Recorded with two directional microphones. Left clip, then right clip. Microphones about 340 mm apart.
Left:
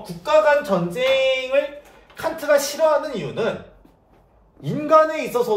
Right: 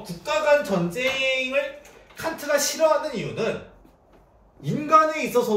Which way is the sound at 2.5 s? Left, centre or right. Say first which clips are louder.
Left 6 dB; centre.